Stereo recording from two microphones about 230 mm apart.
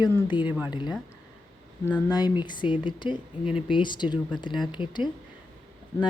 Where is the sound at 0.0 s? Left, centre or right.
Centre.